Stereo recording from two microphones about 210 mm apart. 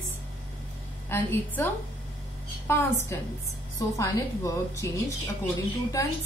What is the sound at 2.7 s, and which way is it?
A woman's voice, 10° left (ahead or behind).